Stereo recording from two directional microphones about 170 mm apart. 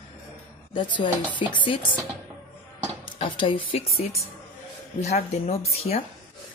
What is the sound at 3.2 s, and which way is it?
Speech, 30° left (ahead or behind).